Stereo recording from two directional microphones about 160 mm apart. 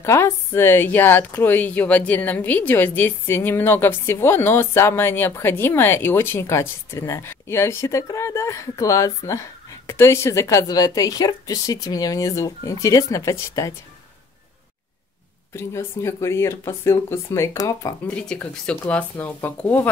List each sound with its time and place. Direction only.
0.0 s a woman's voice: 15° left (ahead or behind)
15.5 s a woman's voice: 15° left (ahead or behind)
18.0 s a woman's voice: 5° left (ahead or behind)